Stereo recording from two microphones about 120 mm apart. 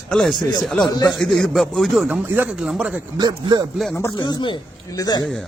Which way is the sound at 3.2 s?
35° right (ahead or behind).